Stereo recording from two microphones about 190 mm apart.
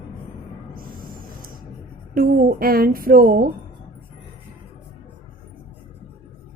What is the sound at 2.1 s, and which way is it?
A woman's voice, 50° right (ahead or behind).